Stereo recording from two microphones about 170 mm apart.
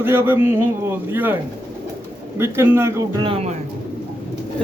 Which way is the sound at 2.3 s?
15° right (ahead or behind).